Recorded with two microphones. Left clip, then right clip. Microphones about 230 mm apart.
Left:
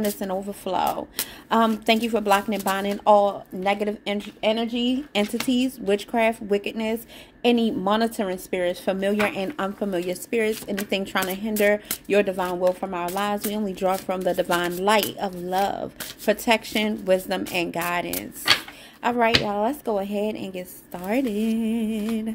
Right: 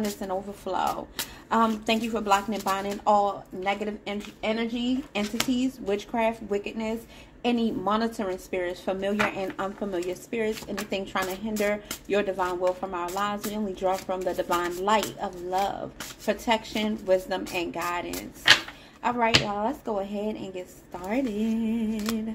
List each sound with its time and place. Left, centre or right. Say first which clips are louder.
0.2 s speech: left 3 dB; left